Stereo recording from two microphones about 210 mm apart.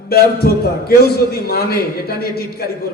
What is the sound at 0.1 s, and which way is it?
A man's voice, 45° left (ahead or behind).